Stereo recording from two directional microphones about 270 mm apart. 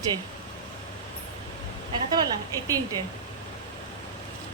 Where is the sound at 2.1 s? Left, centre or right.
Centre.